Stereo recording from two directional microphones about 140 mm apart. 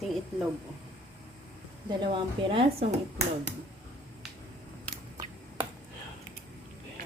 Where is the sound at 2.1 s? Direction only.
40° right (ahead or behind).